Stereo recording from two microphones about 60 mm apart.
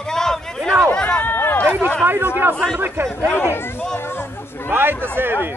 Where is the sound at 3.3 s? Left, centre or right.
Left.